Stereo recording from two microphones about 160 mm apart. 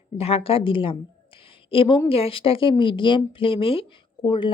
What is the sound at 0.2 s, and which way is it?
Speech, 40° left (ahead or behind).